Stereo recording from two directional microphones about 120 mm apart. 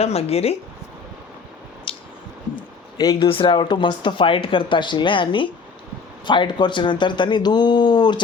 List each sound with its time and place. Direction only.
0.0 s speech: 60° left (ahead or behind)
1.9 s squish: 45° left (ahead or behind)
2.6 s a sound: 35° left (ahead or behind)
3.2 s speech: 45° left (ahead or behind)